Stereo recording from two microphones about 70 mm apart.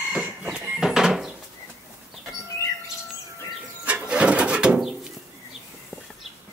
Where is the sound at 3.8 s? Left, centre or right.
Centre.